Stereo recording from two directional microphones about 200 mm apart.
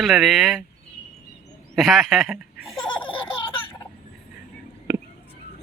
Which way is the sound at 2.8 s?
25° left (ahead or behind).